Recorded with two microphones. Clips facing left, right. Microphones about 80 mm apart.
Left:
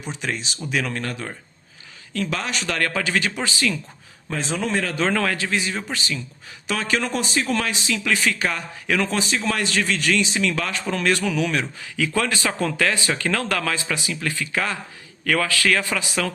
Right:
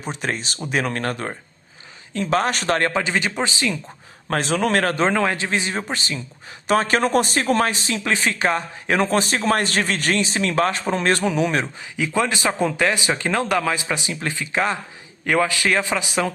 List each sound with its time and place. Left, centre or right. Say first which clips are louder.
0.0 s speech: right 2 dB; right
2.7 s speech: right 2 dB; right
4.3 s a man's voice: right 5 dB; right
5.0 s speech: right 2 dB; right
11.8 s speech: right 2 dB; right